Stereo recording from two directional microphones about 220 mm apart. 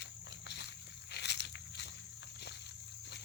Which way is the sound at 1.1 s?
50° left (ahead or behind).